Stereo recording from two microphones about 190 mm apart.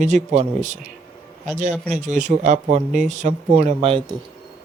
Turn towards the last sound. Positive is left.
turn(degrees=-30)  # may be behind; listen again after turning